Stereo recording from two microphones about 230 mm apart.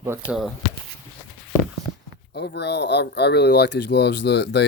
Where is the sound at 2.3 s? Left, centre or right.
Left.